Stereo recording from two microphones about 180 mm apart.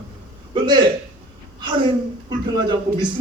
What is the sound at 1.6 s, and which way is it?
A man's voice, 25° right (ahead or behind).